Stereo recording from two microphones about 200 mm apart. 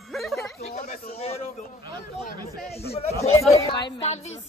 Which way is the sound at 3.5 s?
20° left (ahead or behind).